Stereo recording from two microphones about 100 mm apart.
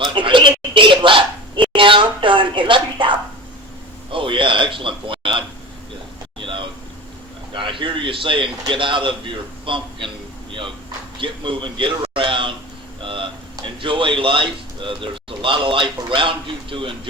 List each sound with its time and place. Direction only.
0.0 s bow-wow: 55° right (ahead or behind)
4.1 s a sound: 60° right (ahead or behind)
7.5 s a man's voice: 55° right (ahead or behind)
11.2 s a man's voice: 55° right (ahead or behind)